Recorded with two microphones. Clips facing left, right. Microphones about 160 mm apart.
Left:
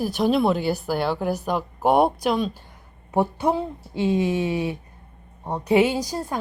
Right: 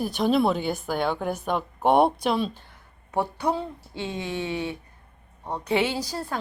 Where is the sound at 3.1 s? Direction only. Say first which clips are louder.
Left 4 dB; 20° left (ahead or behind).